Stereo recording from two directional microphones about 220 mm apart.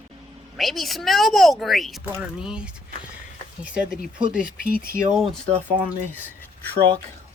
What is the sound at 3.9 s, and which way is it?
Speech, 5° right (ahead or behind).